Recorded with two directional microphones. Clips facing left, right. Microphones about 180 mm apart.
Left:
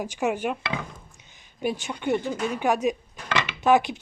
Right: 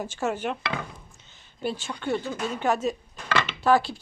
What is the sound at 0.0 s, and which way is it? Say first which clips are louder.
Speech: left 2 dB; 15° left (ahead or behind).